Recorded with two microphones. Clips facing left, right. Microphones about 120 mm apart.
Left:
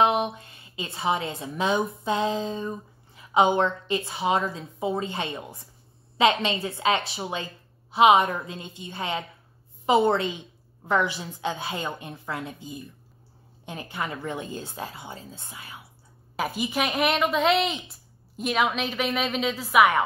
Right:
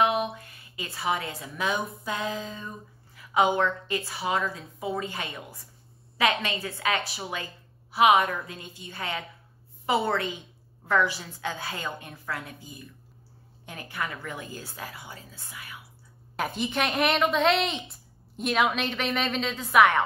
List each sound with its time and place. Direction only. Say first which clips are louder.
0.0 s a woman's voice: left 3 dB; 25° left (ahead or behind)
16.3 s a woman's voice: left 1 dB; 5° left (ahead or behind)